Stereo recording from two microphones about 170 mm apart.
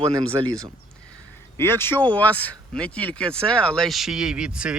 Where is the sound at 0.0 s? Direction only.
30° right (ahead or behind).